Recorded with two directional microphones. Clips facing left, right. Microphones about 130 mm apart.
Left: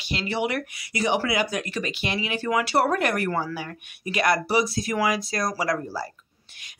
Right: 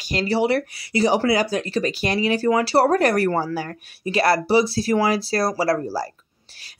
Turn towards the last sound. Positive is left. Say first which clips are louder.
# right 5 dB
turn(degrees=-35)  # may be behind; listen again after turning